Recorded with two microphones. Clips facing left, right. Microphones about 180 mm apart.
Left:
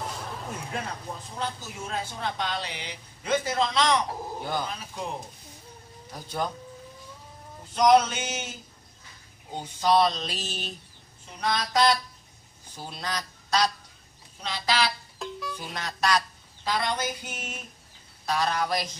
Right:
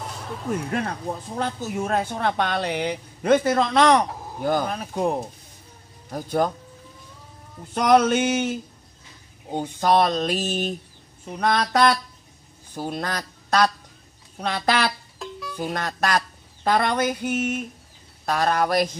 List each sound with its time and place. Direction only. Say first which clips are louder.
0.0 s music: right 2 dB; centre (ahead or behind)
0.7 s speech: right 8 dB; 60° right (ahead or behind)
7.7 s speech: right 3 dB; 60° right (ahead or behind)
15.1 s music: even; centre (ahead or behind)
15.5 s goose: right 8 dB; 50° right (ahead or behind)
18.2 s speech: right 5 dB; 55° right (ahead or behind)